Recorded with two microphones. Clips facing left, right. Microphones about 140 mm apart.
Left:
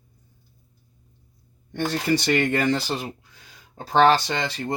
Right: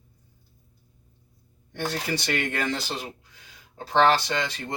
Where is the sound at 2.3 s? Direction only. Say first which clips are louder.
Left 6 dB; 40° left (ahead or behind).